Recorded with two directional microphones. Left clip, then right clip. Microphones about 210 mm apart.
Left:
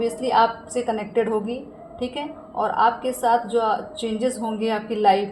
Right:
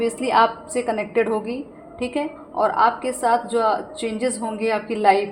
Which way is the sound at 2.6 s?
35° right (ahead or behind).